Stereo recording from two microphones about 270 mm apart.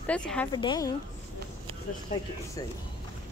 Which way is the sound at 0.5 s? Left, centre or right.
Centre.